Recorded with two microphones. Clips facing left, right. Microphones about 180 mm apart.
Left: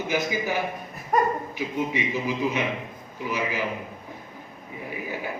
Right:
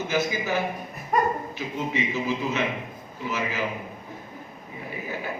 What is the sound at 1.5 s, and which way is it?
A man's voice, 15° left (ahead or behind).